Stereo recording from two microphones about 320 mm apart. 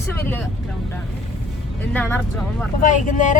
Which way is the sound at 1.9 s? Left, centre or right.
Centre.